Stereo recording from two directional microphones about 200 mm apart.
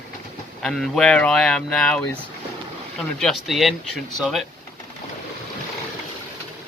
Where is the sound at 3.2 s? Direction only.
Centre (ahead or behind).